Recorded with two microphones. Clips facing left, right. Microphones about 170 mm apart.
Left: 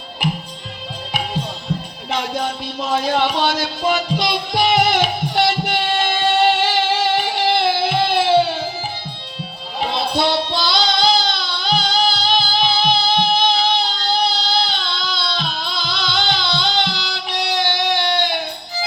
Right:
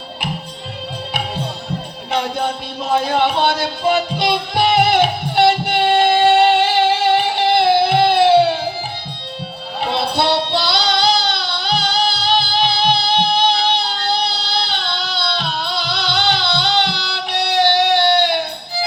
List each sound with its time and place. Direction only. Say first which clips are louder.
2.0 s music: right 2 dB; 60° right (ahead or behind)
10.2 s child singing: right 1 dB; 65° right (ahead or behind)
13.5 s a sound: right 1 dB; 65° right (ahead or behind)